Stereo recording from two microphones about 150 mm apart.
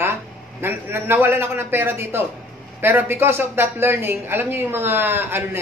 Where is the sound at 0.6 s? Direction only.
15° right (ahead or behind).